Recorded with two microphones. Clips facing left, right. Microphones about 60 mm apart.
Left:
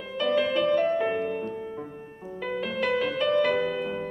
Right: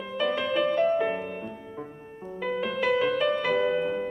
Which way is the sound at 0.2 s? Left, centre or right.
Centre.